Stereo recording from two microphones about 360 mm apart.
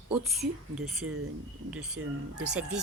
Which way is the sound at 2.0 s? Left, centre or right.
Right.